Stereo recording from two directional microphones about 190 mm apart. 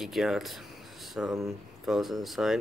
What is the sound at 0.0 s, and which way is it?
Speech, centre (ahead or behind).